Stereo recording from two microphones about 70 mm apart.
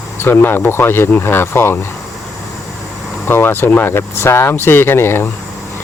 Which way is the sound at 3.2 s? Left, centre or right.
Left.